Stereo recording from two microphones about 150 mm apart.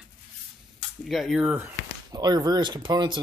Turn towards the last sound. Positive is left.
turn(degrees=-30)  # may be behind; listen again after turning